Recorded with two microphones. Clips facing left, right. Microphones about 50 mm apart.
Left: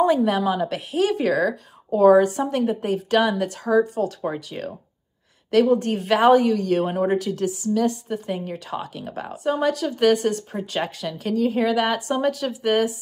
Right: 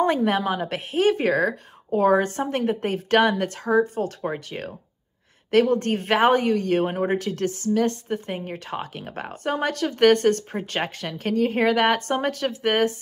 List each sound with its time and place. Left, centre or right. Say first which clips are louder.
0.0 s a woman's voice: left 2 dB; right
4.6 s speech: left 3 dB; right
5.8 s a woman's voice: left 1 dB; right
7.2 s a woman's voice: left 2 dB; right
8.3 s a woman's voice: left 2 dB; right
10.5 s a woman's voice: left 1 dB; right